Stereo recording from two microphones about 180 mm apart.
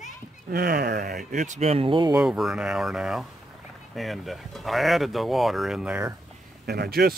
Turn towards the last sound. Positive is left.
turn(degrees=-60)  # may be behind; listen again after turning